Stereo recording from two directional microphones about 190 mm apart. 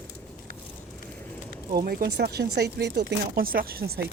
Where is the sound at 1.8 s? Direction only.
50° right (ahead or behind).